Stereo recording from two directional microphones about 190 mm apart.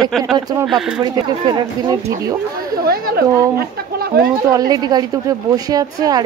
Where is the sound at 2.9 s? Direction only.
55° right (ahead or behind).